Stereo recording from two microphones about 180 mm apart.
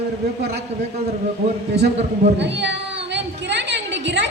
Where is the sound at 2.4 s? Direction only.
75° right (ahead or behind).